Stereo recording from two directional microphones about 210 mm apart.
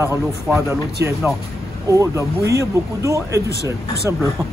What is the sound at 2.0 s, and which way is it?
Speech, 15° right (ahead or behind).